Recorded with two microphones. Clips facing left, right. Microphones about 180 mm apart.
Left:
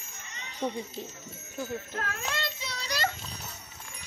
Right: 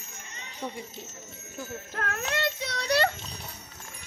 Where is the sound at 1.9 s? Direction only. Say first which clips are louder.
Right 8 dB; 65° right (ahead or behind).